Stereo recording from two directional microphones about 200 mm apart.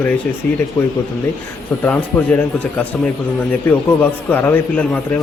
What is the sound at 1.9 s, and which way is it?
Speech, 10° left (ahead or behind).